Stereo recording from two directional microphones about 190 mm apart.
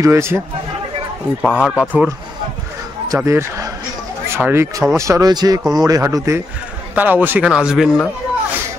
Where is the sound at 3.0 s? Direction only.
15° right (ahead or behind).